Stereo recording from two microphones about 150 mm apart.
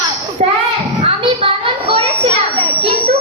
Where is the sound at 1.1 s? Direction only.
40° right (ahead or behind).